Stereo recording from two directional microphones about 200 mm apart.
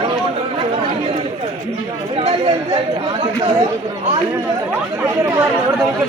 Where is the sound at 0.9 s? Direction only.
30° right (ahead or behind).